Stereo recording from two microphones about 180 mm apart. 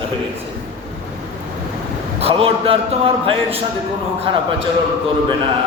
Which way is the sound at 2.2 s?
35° right (ahead or behind).